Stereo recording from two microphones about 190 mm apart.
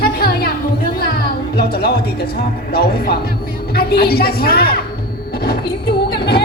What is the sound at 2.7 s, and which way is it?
A woman's voice, 55° left (ahead or behind).